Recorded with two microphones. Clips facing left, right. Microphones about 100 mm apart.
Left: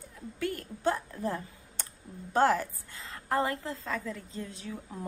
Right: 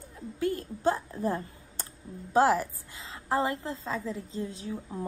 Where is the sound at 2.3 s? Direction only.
5° right (ahead or behind).